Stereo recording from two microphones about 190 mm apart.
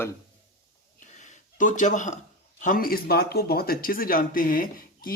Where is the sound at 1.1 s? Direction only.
40° left (ahead or behind).